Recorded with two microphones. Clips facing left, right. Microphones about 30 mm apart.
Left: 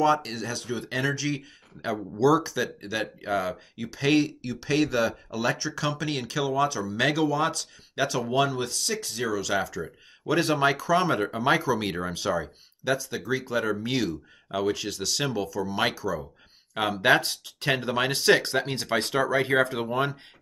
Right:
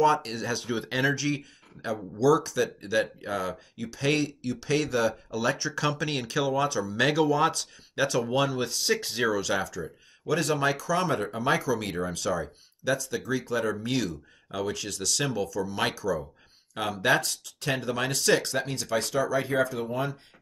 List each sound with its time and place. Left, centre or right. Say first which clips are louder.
0.0 s speech: even; centre
2.1 s speech: even; centre
8.9 s speech: right 3 dB; right
9.2 s speech: left 1 dB; centre
9.6 s speech: left 2 dB; centre
10.2 s speech: left 3 dB; left